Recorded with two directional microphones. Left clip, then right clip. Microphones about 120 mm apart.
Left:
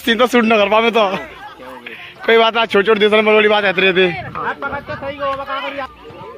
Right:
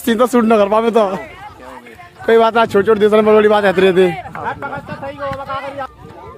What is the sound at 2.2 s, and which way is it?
Speech, 30° right (ahead or behind).